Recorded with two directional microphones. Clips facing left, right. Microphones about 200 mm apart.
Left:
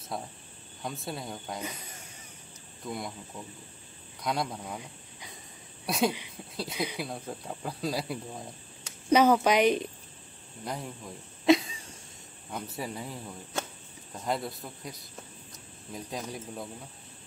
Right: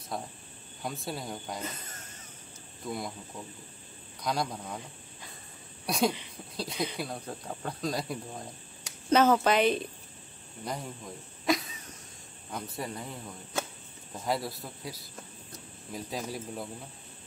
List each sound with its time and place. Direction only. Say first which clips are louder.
0.1 s speech: even; centre (ahead or behind)
1.6 s a sound: even; 10° left (ahead or behind)
2.8 s speech: right 1 dB; centre (ahead or behind)
4.2 s speech: even; centre (ahead or behind)
5.9 s speech: even; centre (ahead or behind)
10.6 s speech: even; centre (ahead or behind)
11.4 s a sound: left 7 dB; 25° left (ahead or behind)
12.4 s speech: even; 5° left (ahead or behind)